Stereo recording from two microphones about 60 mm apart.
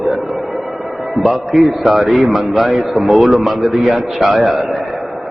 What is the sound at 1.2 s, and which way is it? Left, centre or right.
A man's voice, centre.